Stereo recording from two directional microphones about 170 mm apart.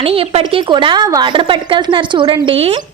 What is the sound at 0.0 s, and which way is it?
A woman's voice, 35° right (ahead or behind).